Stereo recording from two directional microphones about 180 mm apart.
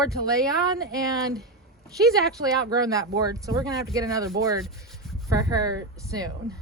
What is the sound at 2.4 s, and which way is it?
Speech, 20° right (ahead or behind).